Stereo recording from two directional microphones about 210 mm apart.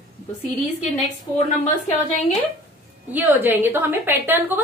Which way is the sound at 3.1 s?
10° right (ahead or behind).